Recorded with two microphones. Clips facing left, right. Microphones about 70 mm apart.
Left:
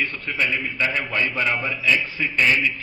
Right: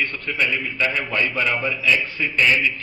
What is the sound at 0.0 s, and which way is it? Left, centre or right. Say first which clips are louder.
A man's voice: right 1 dB; centre.